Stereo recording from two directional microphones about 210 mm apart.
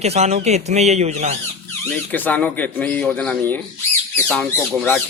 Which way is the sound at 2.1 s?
10° left (ahead or behind).